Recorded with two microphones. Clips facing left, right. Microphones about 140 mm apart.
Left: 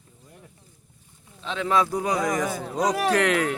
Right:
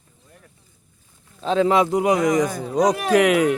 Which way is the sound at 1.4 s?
40° right (ahead or behind).